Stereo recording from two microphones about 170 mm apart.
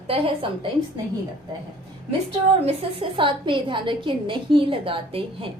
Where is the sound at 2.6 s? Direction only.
30° right (ahead or behind).